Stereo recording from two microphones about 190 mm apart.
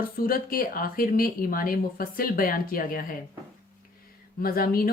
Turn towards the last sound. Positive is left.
turn(degrees=50)  # may be behind; listen again after turning